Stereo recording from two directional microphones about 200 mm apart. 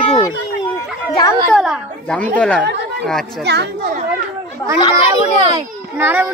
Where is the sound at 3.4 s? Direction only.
55° right (ahead or behind).